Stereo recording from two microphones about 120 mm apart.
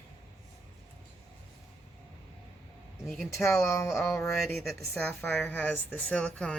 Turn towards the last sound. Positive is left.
turn(degrees=10)  # may be behind; listen again after turning